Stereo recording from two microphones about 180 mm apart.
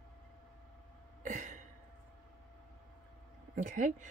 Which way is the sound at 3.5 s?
45° right (ahead or behind).